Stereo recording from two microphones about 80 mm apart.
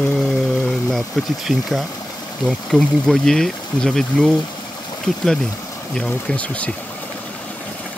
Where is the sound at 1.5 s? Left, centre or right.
Centre.